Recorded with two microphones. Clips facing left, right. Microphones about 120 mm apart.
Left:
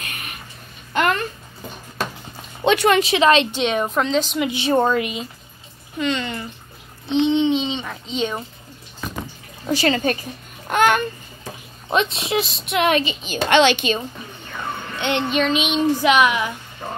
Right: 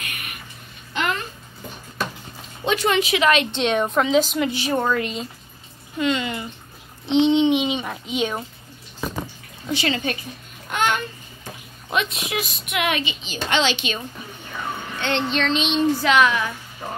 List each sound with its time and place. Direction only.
0.9 s babbling: 55° left (ahead or behind)
2.6 s speech: 70° left (ahead or behind)
3.0 s a woman's voice: 30° left (ahead or behind)
3.5 s a woman's voice: centre (ahead or behind)
4.5 s a woman's voice: 25° left (ahead or behind)
4.9 s speech: 10° left (ahead or behind)
5.9 s a woman's voice: 5° right (ahead or behind)
7.1 s a child's voice: 20° right (ahead or behind)
9.7 s speech: 40° left (ahead or behind)
10.7 s babbling: 50° left (ahead or behind)
11.9 s a woman's voice: 30° left (ahead or behind)
13.2 s a woman's voice: 60° left (ahead or behind)
15.0 s speech: 15° left (ahead or behind)
16.8 s a woman's voice: centre (ahead or behind)